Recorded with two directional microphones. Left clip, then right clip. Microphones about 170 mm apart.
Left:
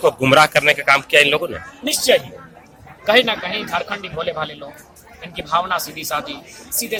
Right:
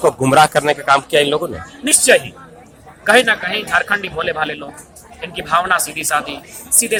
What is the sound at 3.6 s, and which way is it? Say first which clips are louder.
Speech: right 6 dB; 25° right (ahead or behind).